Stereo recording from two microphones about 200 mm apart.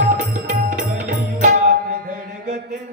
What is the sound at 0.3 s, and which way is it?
Music, 40° right (ahead or behind).